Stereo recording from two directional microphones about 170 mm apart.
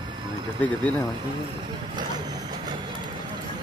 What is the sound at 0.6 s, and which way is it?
Speech, 10° left (ahead or behind).